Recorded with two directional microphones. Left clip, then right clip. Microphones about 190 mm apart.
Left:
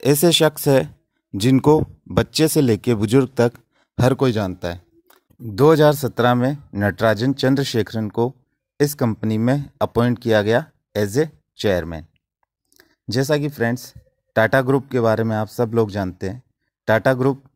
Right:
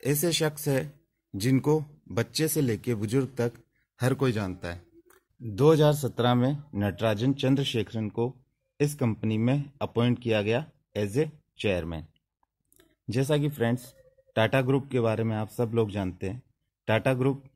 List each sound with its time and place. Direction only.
0.0 s speech: 50° left (ahead or behind)
9.0 s a man's voice: 30° left (ahead or behind)
9.3 s speech: 45° left (ahead or behind)
13.1 s a man's voice: 40° left (ahead or behind)